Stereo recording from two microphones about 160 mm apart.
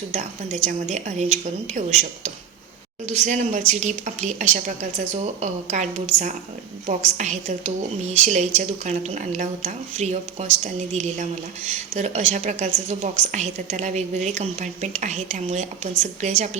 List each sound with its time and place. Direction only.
0.1 s speech: 50° right (ahead or behind)